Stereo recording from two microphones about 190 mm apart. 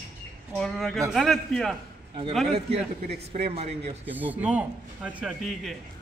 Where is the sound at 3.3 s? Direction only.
30° right (ahead or behind).